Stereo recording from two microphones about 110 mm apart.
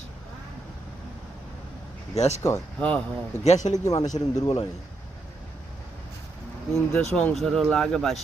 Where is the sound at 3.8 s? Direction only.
30° left (ahead or behind).